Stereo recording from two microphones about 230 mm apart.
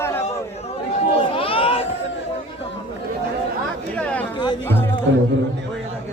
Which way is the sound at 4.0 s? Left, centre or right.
Centre.